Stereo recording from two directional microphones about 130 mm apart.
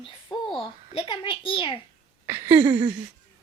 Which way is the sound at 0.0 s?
40° left (ahead or behind).